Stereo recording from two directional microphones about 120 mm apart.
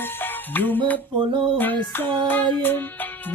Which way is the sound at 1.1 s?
40° right (ahead or behind).